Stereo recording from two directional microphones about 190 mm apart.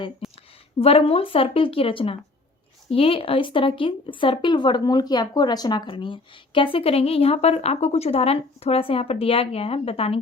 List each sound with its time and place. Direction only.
0.2 s a woman's voice: centre (ahead or behind)
0.8 s speech: 30° left (ahead or behind)